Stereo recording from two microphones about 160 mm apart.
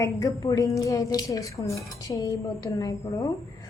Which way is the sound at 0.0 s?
20° left (ahead or behind).